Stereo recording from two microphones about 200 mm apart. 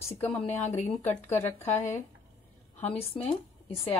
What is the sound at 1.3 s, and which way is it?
Speech, 10° left (ahead or behind).